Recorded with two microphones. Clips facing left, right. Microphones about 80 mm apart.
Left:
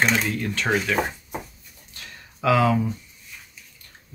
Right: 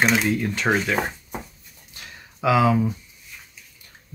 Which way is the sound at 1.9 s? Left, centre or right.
Centre.